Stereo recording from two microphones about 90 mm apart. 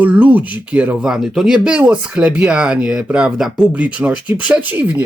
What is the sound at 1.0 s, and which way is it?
Speech, 5° right (ahead or behind).